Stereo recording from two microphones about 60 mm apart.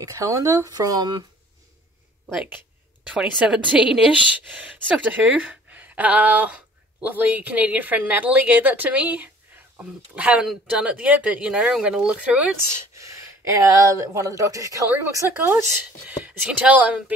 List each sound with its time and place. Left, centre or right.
0.0 s speech: right
3.1 s a woman's voice: centre
10.4 s speech: centre
12.9 s speech: right
16.1 s a woman's voice: right